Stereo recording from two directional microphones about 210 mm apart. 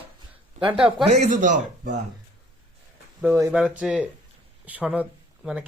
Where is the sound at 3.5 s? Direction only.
5° right (ahead or behind).